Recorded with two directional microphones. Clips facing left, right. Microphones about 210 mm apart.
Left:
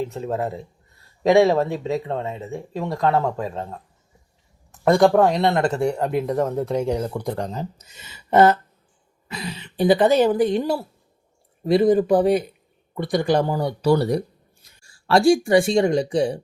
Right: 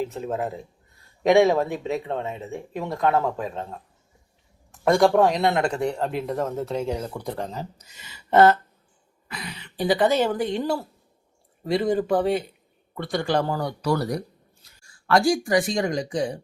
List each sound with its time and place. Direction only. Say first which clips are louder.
0.0 s speech: left 2 dB; centre (ahead or behind); by 16.4 s 30° left (ahead or behind)